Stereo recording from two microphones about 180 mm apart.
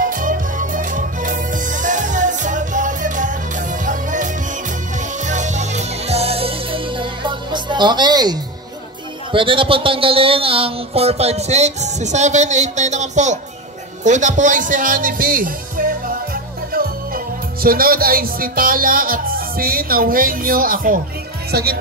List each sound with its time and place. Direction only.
0.0 s music: 50° right (ahead or behind); by 8.4 s 20° right (ahead or behind)
9.3 s speech: 30° right (ahead or behind); by 21.7 s 60° right (ahead or behind)